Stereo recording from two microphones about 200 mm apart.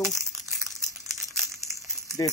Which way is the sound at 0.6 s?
15° right (ahead or behind).